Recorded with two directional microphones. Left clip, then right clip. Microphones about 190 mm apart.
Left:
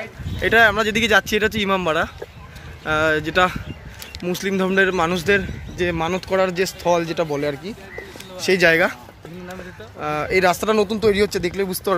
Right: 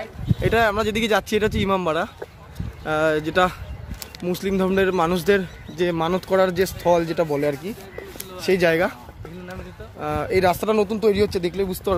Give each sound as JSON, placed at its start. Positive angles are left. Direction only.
{"t": 0.4, "sound": "speech", "side_deg": 0}
{"t": 8.4, "sound": "speech", "side_deg": 0}
{"t": 9.9, "sound": "speech", "side_deg": -5}